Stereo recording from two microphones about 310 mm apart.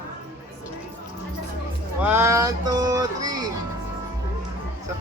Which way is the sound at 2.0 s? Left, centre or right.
Centre.